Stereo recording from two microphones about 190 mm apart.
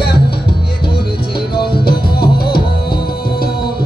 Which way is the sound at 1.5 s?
55° left (ahead or behind).